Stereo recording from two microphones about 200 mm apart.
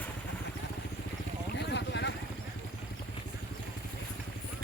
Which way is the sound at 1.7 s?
60° left (ahead or behind).